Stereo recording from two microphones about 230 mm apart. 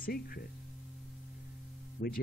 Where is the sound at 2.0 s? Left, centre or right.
Left.